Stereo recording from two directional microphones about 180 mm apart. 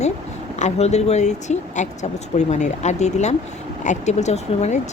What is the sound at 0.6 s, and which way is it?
Speech, 40° left (ahead or behind).